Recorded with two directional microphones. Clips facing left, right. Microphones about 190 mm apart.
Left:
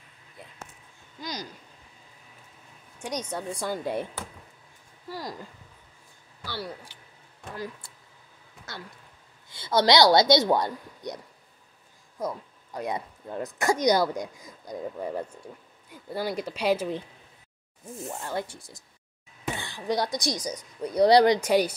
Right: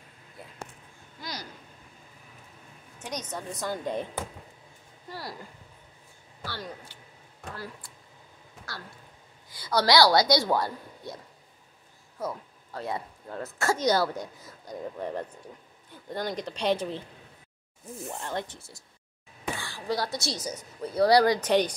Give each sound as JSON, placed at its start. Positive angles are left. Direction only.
{"t": 1.2, "sound": "vehicle", "side_deg": 20}
{"t": 3.0, "sound": "speech", "side_deg": 10}
{"t": 6.4, "sound": "speech", "side_deg": 10}
{"t": 12.2, "sound": "speech", "side_deg": 15}
{"t": 18.0, "sound": "speech", "side_deg": 10}
{"t": 21.4, "sound": "speech", "side_deg": 10}